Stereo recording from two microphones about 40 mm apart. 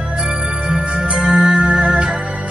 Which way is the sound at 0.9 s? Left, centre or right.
Right.